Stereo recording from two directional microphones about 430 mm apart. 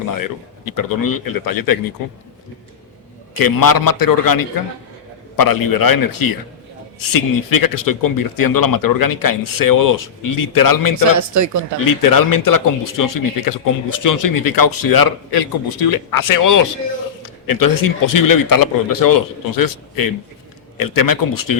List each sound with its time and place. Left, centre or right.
0.1 s speech: left
3.3 s speech: left
11.2 s speech: right
11.8 s speech: left